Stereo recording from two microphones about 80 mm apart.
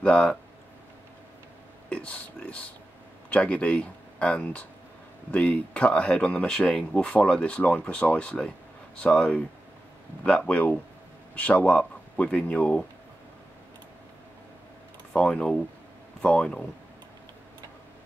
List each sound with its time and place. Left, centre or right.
0.0 s speech: centre
1.9 s speech: centre
15.1 s speech: centre